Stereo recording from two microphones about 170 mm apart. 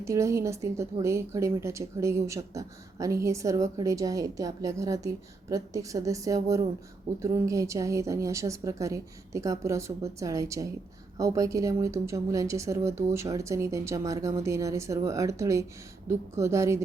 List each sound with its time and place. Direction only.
0.0 s a woman's voice: 15° right (ahead or behind)